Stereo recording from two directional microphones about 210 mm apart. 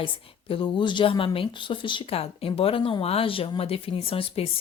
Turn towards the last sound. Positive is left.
turn(degrees=25)  # may be behind; listen again after turning